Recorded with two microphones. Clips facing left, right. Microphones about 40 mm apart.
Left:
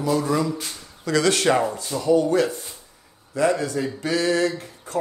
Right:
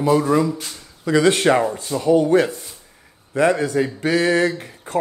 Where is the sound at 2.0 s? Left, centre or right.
Right.